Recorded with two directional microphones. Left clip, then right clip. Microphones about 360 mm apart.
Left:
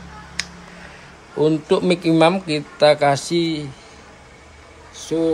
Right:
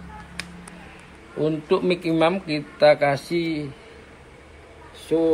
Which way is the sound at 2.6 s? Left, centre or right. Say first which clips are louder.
Left 1 dB; left.